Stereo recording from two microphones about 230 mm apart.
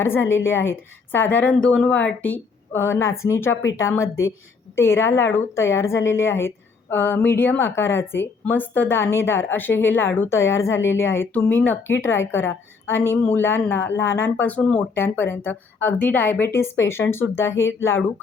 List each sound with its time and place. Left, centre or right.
0.0 s a woman's voice: centre